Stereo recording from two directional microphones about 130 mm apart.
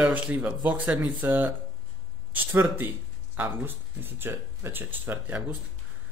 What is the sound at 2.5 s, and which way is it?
Speech, 15° right (ahead or behind).